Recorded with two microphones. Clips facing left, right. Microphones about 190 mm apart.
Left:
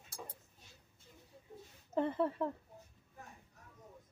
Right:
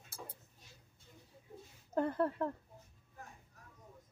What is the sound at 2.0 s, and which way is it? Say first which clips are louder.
Speech: even; centre (ahead or behind).